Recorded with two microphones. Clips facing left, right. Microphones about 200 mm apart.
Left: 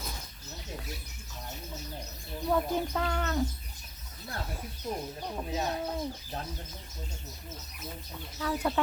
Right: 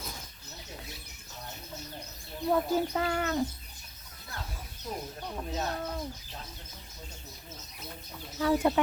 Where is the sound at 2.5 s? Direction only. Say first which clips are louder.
Right 2 dB; 5° right (ahead or behind).